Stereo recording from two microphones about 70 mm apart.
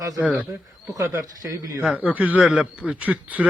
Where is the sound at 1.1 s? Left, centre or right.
Right.